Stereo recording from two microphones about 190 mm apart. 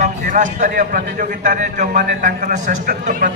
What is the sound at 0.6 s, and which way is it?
A man's voice, 45° right (ahead or behind).